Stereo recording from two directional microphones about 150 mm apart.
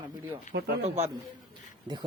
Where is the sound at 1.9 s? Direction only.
30° right (ahead or behind).